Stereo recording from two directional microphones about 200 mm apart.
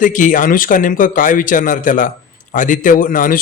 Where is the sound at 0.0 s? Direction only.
40° left (ahead or behind).